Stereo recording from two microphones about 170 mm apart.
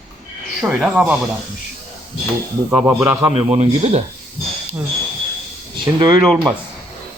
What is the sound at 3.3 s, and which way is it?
Speech, 40° right (ahead or behind).